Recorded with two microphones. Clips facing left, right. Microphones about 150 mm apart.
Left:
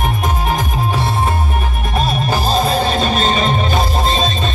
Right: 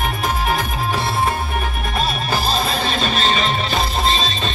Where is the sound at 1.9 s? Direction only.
45° left (ahead or behind).